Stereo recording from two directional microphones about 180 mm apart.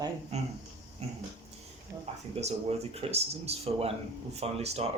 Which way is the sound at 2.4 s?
35° right (ahead or behind).